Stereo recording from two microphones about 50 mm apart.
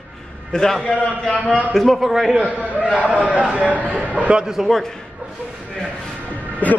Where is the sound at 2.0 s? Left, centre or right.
Centre.